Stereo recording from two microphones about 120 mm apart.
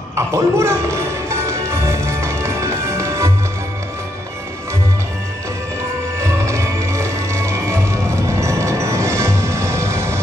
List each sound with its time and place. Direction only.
0.1 s music: 20° right (ahead or behind)
6.2 s music: 25° right (ahead or behind)